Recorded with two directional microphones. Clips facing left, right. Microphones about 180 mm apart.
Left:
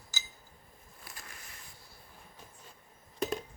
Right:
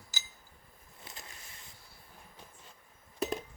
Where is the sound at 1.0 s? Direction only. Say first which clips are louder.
Right 1 dB; 20° right (ahead or behind).